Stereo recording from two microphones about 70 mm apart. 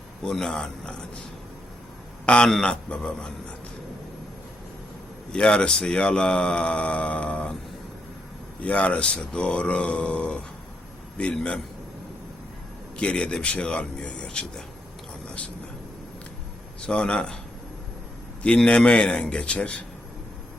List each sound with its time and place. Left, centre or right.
0.3 s speech: centre
2.2 s a man's voice: centre
5.3 s speech: centre
8.6 s speech: centre
13.0 s speech: centre
16.8 s speech: centre
18.4 s speech: centre